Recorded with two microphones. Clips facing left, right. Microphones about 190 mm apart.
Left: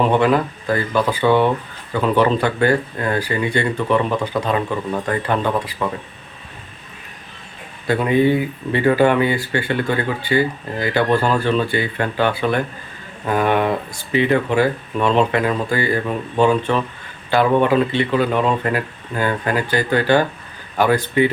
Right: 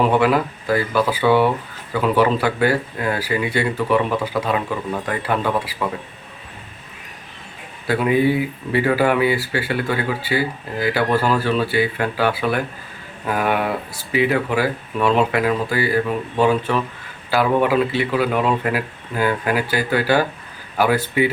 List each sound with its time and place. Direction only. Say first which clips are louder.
0.1 s speech: left 1 dB; 5° right (ahead or behind)
7.9 s speech: left 1 dB; 5° right (ahead or behind)